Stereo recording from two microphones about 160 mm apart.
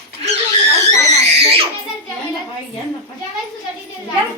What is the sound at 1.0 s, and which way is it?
Speech, 45° right (ahead or behind).